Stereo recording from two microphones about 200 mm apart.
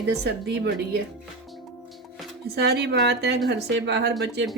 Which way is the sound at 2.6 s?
55° right (ahead or behind).